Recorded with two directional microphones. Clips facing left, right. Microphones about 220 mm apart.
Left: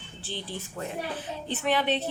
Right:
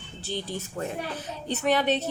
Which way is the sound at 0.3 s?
40° right (ahead or behind).